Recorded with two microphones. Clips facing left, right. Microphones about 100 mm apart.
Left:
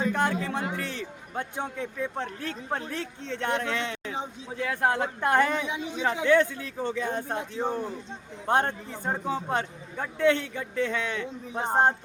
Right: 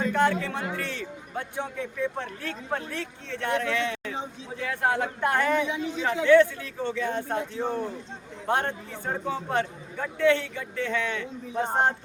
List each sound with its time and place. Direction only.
0.0 s a man's voice: 15° left (ahead or behind)
9.0 s a man's voice: 25° left (ahead or behind)